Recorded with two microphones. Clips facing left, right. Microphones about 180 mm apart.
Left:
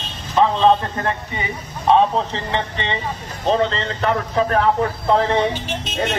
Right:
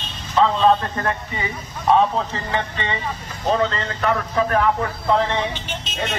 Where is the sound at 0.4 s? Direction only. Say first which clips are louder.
Left 1 dB; 20° left (ahead or behind).